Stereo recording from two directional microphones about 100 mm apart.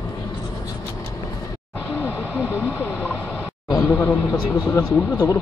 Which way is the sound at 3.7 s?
25° left (ahead or behind).